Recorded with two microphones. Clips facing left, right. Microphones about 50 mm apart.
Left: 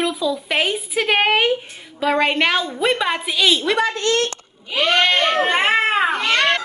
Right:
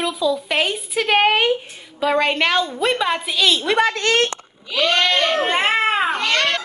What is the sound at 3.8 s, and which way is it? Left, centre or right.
Speech, right.